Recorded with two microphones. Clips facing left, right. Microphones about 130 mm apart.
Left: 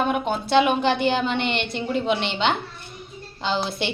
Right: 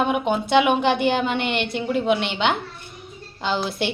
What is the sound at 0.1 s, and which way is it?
A woman's voice, 15° right (ahead or behind).